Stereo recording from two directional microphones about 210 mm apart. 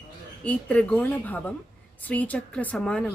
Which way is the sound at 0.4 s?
5° left (ahead or behind).